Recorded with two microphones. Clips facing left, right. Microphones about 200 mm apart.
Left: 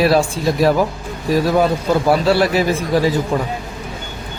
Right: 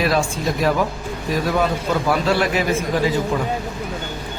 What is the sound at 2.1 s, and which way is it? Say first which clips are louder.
Speech: left 4 dB; 35° left (ahead or behind).